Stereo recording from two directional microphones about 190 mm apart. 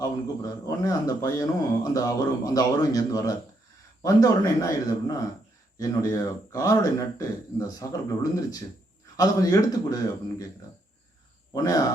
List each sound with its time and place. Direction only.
0.0 s speech: 20° left (ahead or behind)
11.5 s speech: 20° left (ahead or behind)